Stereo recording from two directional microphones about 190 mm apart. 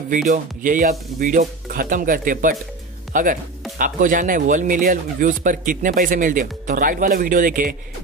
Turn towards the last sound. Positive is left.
turn(degrees=-50)  # may be behind; listen again after turning